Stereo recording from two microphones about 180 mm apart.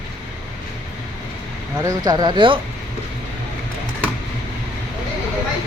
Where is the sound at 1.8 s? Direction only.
20° right (ahead or behind).